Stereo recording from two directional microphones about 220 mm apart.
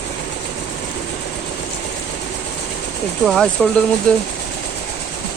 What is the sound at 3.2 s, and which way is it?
Speech, centre (ahead or behind).